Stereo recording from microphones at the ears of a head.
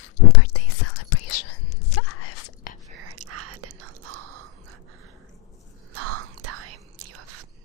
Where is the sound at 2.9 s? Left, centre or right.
Right.